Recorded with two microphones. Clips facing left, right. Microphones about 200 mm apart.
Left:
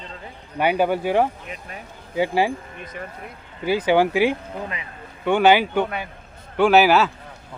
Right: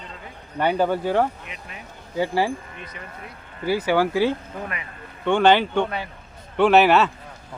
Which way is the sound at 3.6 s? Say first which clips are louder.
Left 2 dB; 20° left (ahead or behind).